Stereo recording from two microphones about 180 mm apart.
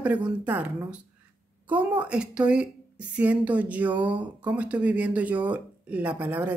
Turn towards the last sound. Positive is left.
turn(degrees=-10)  # may be behind; listen again after turning